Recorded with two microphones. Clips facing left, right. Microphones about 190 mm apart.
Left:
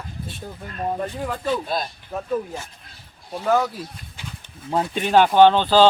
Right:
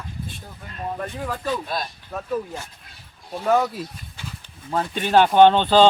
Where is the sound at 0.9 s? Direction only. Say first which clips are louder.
Left 2 dB; 15° left (ahead or behind).